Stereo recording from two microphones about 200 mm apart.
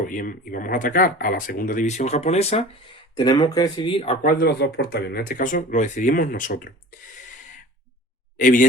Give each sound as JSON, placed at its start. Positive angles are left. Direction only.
{"t": 0.0, "sound": "speech", "side_deg": 45}
{"t": 4.2, "sound": "speech", "side_deg": 45}
{"t": 8.4, "sound": "speech", "side_deg": 40}